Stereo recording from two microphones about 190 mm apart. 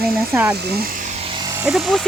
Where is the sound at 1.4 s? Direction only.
20° right (ahead or behind).